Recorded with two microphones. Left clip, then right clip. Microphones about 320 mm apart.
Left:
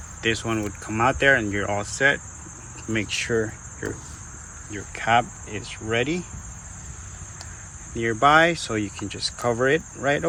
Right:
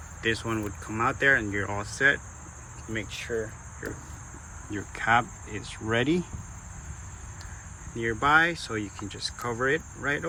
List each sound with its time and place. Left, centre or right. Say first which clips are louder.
0.2 s speech: left 4 dB; centre
4.7 s speech: left 3 dB; centre
7.9 s speech: left 5 dB; centre